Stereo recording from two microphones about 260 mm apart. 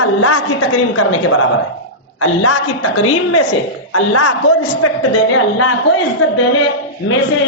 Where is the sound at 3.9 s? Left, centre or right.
Left.